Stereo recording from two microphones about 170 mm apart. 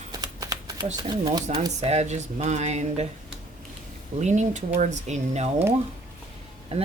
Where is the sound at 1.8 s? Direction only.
40° right (ahead or behind).